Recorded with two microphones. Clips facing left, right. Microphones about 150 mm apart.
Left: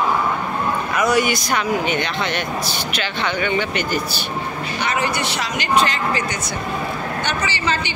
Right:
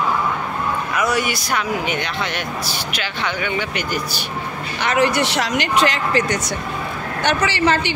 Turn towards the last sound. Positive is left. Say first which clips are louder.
# right 5 dB
turn(degrees=-70)  # may be behind; listen again after turning